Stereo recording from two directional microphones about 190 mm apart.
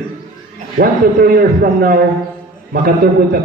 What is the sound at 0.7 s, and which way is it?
A man's voice, 50° right (ahead or behind).